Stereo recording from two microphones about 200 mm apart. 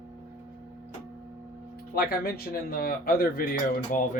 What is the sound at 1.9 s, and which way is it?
Speech, 50° left (ahead or behind).